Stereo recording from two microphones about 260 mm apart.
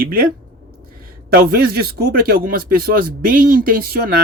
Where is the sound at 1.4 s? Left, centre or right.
Right.